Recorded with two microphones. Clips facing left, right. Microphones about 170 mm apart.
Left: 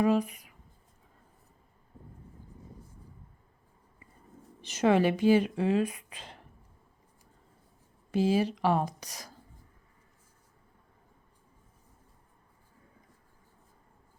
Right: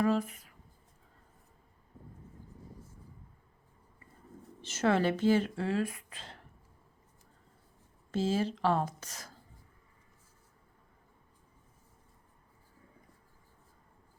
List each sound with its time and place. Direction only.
0.0 s speech: 15° left (ahead or behind)
4.6 s a woman's voice: 15° left (ahead or behind)
8.1 s a woman's voice: 15° left (ahead or behind)